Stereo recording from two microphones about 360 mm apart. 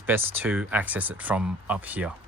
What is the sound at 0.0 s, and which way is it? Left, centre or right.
Speech, centre.